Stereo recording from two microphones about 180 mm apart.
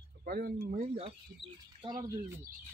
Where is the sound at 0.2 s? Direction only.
55° right (ahead or behind).